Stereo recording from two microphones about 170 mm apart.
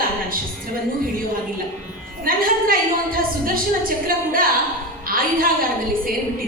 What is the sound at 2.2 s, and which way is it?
A woman's voice, 55° right (ahead or behind).